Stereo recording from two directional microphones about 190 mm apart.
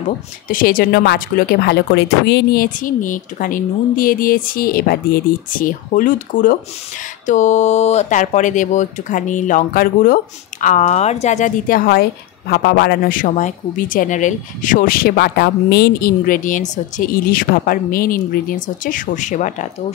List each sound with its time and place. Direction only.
0.5 s speech: 45° left (ahead or behind)